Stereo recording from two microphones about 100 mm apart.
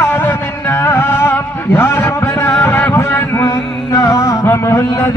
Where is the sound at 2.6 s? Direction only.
25° left (ahead or behind).